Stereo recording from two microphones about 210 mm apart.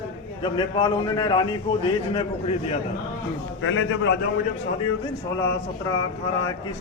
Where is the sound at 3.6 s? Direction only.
70° left (ahead or behind).